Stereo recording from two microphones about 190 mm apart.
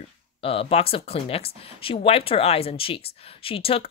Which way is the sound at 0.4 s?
30° left (ahead or behind).